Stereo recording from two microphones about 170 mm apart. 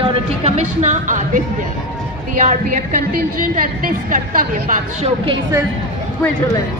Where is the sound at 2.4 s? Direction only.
50° right (ahead or behind).